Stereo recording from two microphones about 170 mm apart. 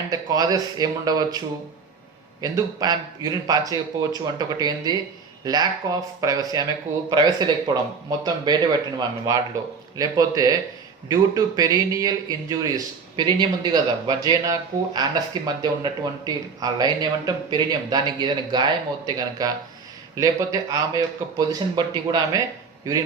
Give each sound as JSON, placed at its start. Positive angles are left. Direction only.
{"t": 0.1, "sound": "speech", "side_deg": -20}
{"t": 2.4, "sound": "speech", "side_deg": -20}